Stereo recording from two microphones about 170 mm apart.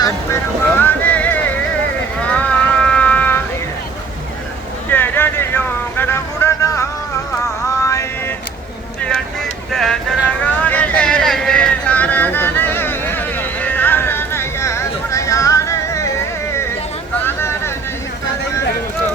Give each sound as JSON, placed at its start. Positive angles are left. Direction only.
{"t": 0.8, "sound": "a sound", "side_deg": 10}
{"t": 2.2, "sound": "music", "side_deg": 5}
{"t": 4.9, "sound": "vehicle", "side_deg": 10}
{"t": 7.8, "sound": "mantra", "side_deg": 20}
{"t": 9.7, "sound": "a sound", "side_deg": 0}
{"t": 10.4, "sound": "vehicle", "side_deg": 10}
{"t": 17.2, "sound": "vehicle", "side_deg": 15}